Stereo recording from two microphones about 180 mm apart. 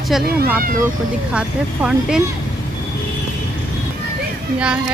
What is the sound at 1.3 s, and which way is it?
Speech, 5° right (ahead or behind).